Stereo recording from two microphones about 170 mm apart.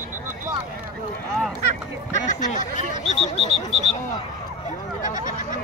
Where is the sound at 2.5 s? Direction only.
45° left (ahead or behind).